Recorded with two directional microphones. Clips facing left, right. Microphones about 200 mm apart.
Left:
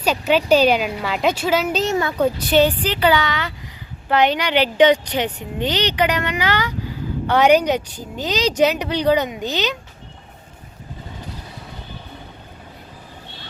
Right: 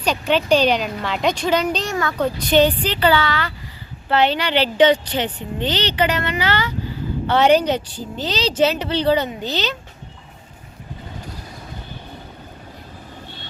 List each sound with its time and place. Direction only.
0.0 s speech: 5° left (ahead or behind)
1.8 s a child's voice: 20° left (ahead or behind)
2.1 s speech: 10° left (ahead or behind)